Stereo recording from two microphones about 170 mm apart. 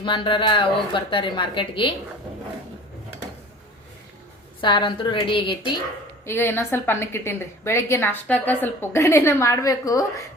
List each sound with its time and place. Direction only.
0.0 s a woman's voice: 30° left (ahead or behind)
4.6 s a woman's voice: 30° left (ahead or behind)
6.2 s a woman's voice: 15° left (ahead or behind)